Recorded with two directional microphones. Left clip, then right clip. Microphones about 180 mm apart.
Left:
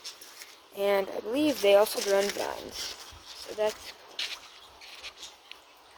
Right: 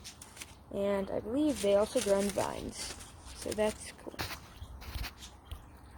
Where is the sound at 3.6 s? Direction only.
10° right (ahead or behind).